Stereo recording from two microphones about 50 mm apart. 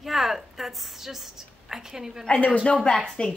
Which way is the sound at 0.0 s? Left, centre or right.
Centre.